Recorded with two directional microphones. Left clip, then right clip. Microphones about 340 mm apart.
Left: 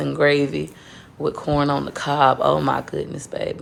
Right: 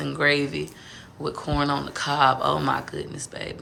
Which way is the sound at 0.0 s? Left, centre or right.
Centre.